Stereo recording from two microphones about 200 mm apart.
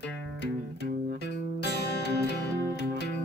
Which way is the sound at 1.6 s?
55° left (ahead or behind).